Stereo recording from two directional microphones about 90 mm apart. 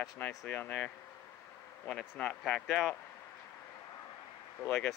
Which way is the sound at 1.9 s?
10° left (ahead or behind).